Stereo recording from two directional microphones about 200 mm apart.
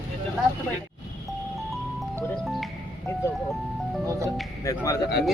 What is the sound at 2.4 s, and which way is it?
Music, centre (ahead or behind).